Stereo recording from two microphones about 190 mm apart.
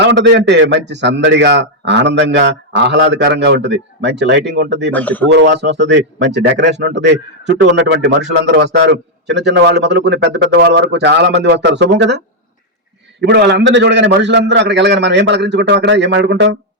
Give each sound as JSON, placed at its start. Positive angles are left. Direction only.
{"t": 0.0, "sound": "a man's voice", "side_deg": -65}
{"t": 4.9, "sound": "a man's voice", "side_deg": 10}
{"t": 5.3, "sound": "a man's voice", "side_deg": -65}
{"t": 13.2, "sound": "a man's voice", "side_deg": -65}